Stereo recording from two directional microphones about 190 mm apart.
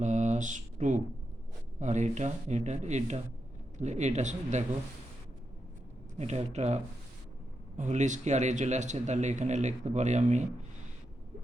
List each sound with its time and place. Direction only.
0.0 s mantra: 40° right (ahead or behind)
1.8 s a man's voice: 40° right (ahead or behind)
6.1 s a man's voice: 35° right (ahead or behind)